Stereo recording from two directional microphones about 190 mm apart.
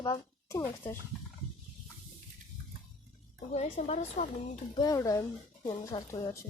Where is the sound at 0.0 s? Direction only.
15° left (ahead or behind).